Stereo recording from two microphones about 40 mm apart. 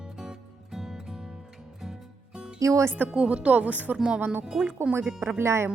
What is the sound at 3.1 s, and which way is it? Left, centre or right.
Speech, right.